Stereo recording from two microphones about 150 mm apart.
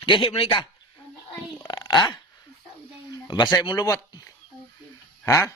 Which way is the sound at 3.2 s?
30° left (ahead or behind).